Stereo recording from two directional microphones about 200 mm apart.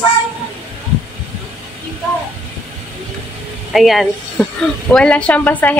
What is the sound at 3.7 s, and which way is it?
Speech, centre (ahead or behind).